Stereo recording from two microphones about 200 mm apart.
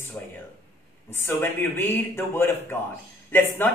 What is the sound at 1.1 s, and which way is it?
A man's voice, 10° left (ahead or behind).